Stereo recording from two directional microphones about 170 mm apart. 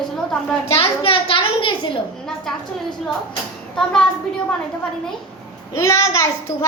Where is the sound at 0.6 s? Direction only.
35° left (ahead or behind).